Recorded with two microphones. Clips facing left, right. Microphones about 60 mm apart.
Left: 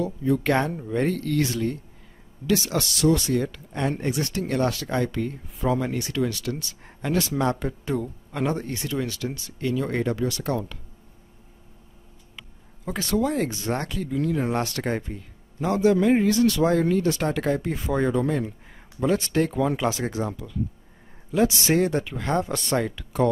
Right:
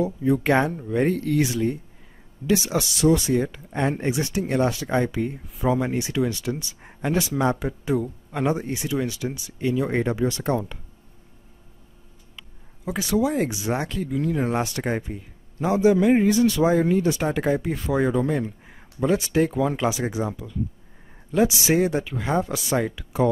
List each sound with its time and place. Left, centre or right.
0.0 s speech: centre
0.7 s speech: centre; by 10.6 s right
12.8 s speech: centre